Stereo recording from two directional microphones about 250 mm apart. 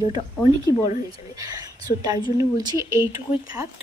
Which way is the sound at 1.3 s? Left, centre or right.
Centre.